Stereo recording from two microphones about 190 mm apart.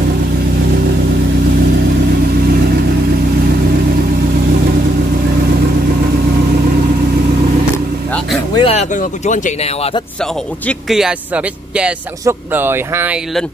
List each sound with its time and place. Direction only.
8.5 s speech: 35° left (ahead or behind)
10.7 s a man's voice: centre (ahead or behind)